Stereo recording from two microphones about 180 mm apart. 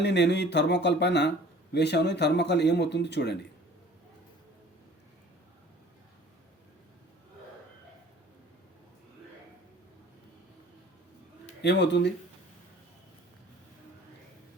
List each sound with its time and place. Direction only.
0.0 s speech: 75° left (ahead or behind)
11.6 s speech: 75° left (ahead or behind)